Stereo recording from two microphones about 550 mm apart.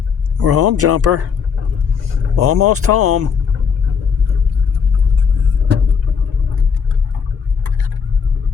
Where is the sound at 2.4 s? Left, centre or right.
Right.